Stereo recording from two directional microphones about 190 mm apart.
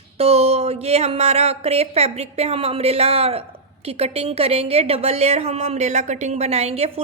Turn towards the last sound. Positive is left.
turn(degrees=-30)  # may be behind; listen again after turning